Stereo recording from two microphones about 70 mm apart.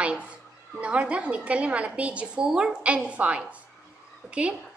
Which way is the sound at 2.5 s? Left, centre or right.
Centre.